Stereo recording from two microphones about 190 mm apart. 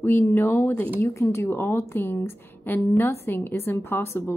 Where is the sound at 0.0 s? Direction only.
10° left (ahead or behind).